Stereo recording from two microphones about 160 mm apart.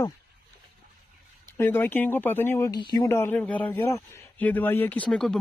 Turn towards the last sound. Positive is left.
turn(degrees=5)  # may be behind; listen again after turning